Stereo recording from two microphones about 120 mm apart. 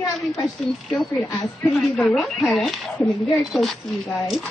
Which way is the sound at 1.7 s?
Centre (ahead or behind).